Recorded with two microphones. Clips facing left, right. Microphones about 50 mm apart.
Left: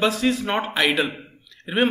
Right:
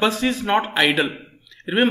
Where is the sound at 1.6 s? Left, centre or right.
Centre.